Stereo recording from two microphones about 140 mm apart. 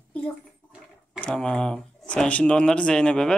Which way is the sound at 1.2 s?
10° left (ahead or behind).